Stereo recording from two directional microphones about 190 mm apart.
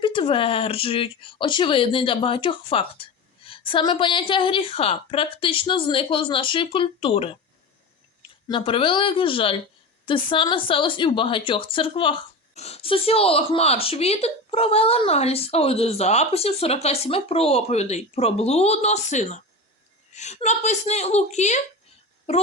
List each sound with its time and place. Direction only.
0.0 s speech: 25° left (ahead or behind)
8.4 s speech: 25° left (ahead or behind)